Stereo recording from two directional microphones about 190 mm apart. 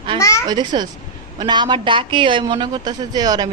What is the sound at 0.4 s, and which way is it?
Speech, 20° right (ahead or behind).